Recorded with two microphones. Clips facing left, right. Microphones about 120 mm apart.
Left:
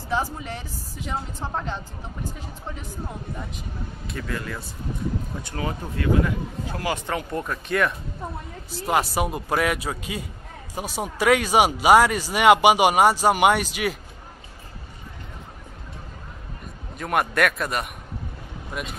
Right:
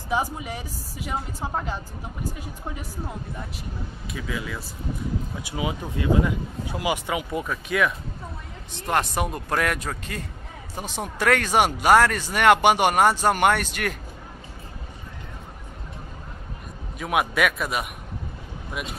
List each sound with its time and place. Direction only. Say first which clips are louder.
0.1 s speech: right 1 dB; 10° right (ahead or behind)
4.1 s speech: even; 5° right (ahead or behind)
17.0 s speech: left 1 dB; 5° right (ahead or behind)